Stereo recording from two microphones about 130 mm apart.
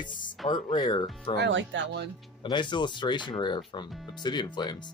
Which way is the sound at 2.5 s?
35° left (ahead or behind).